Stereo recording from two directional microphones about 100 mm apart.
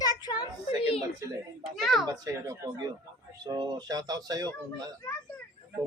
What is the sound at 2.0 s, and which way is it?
Speech, 30° right (ahead or behind).